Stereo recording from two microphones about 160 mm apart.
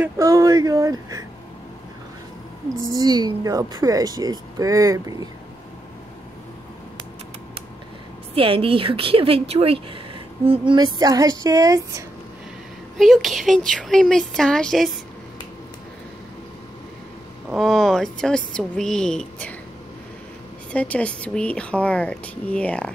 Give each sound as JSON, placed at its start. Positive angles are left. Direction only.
{"t": 0.0, "sound": "speech", "side_deg": -20}
{"t": 2.9, "sound": "speech", "side_deg": -25}
{"t": 8.4, "sound": "speech", "side_deg": -35}
{"t": 12.9, "sound": "speech", "side_deg": 0}
{"t": 17.6, "sound": "speech", "side_deg": 0}
{"t": 20.7, "sound": "speech", "side_deg": 10}